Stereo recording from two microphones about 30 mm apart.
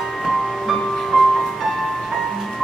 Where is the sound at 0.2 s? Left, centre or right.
Centre.